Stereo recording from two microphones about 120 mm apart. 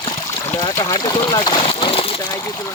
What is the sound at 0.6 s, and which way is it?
Speech, 30° left (ahead or behind).